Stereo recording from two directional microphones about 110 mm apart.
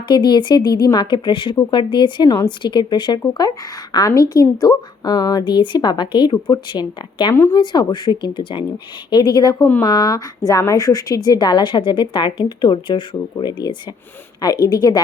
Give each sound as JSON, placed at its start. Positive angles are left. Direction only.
{"t": 0.1, "sound": "a woman's voice", "side_deg": 45}